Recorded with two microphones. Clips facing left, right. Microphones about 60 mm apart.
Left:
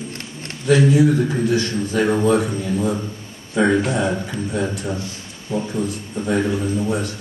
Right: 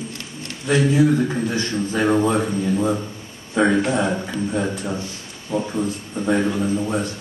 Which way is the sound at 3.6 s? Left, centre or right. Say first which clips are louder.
Even; centre.